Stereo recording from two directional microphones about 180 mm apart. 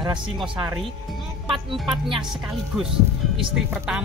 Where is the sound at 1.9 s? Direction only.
25° right (ahead or behind).